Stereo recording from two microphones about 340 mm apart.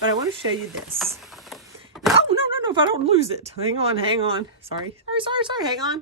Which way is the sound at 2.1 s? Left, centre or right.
Centre.